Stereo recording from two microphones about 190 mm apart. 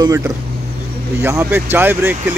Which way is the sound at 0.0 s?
15° right (ahead or behind).